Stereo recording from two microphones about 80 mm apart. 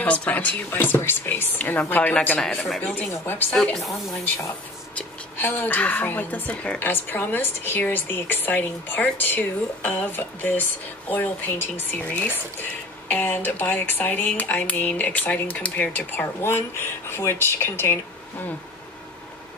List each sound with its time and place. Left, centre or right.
0.0 s speech: centre
4.9 s speech: left
6.8 s speech: left
16.3 s speech: left